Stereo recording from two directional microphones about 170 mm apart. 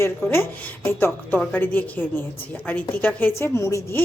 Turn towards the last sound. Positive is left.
turn(degrees=15)  # may be behind; listen again after turning